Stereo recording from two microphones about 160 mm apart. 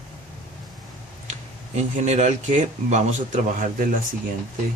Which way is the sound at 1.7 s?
45° right (ahead or behind).